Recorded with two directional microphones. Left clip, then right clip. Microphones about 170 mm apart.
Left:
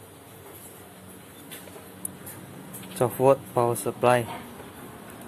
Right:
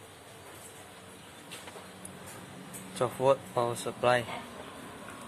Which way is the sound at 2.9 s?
10° left (ahead or behind).